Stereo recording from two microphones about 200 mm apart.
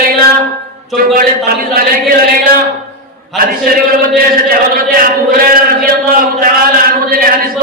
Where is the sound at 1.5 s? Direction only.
45° right (ahead or behind).